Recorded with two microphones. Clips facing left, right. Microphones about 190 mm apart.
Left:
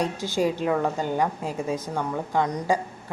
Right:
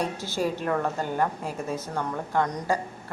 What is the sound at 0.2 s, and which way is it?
A woman's voice, 15° left (ahead or behind).